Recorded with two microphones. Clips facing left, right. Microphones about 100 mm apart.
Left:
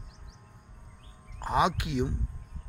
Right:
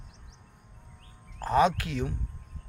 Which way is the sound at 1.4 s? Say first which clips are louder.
Right 3 dB; 15° left (ahead or behind).